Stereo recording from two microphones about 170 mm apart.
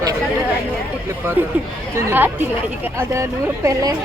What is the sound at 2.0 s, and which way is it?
Speech, 15° right (ahead or behind).